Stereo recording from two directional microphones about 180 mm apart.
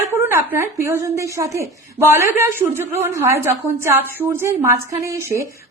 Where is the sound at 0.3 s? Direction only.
10° right (ahead or behind).